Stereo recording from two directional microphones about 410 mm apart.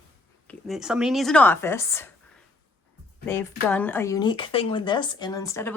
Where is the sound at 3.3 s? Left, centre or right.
Centre.